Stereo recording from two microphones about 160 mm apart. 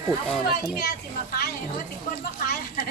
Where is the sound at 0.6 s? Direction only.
85° left.